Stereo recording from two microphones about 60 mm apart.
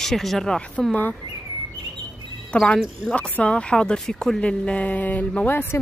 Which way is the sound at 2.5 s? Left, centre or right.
Centre.